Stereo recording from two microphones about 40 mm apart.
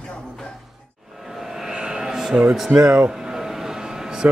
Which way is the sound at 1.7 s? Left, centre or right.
Centre.